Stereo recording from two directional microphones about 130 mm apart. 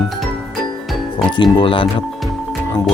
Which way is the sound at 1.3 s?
35° left (ahead or behind).